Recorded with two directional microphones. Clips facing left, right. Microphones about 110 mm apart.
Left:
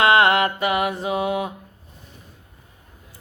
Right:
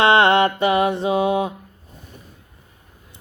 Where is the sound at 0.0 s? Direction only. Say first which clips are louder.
Right 2 dB; 30° right (ahead or behind).